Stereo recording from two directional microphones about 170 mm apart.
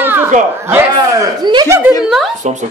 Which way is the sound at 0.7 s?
20° right (ahead or behind).